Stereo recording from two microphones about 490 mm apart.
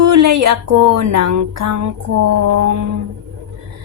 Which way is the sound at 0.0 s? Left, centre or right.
Right.